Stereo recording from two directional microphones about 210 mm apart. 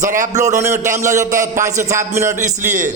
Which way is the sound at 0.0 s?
40° right (ahead or behind).